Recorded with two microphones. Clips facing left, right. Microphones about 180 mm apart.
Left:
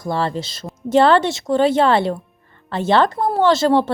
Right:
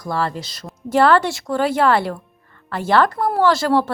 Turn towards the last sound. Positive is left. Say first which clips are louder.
# left 2 dB
turn(degrees=25)  # may be behind; listen again after turning